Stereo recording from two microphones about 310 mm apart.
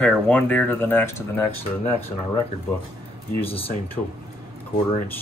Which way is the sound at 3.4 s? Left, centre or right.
Centre.